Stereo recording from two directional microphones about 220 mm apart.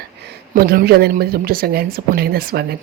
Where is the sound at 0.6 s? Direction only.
45° right (ahead or behind).